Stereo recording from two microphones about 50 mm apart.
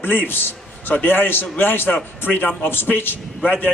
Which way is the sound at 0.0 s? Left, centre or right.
Left.